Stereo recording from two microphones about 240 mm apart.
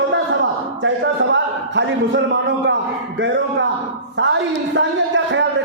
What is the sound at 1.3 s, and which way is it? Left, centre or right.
Speech, right.